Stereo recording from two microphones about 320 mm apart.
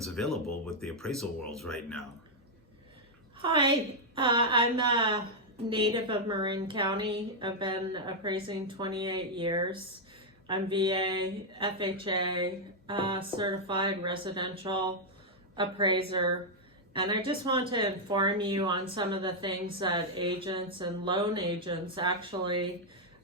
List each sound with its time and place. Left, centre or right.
0.0 s a sound: centre
0.8 s speech: centre
3.4 s a woman's voice: centre